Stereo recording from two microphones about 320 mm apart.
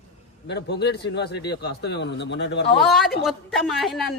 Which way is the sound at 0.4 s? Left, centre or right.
Left.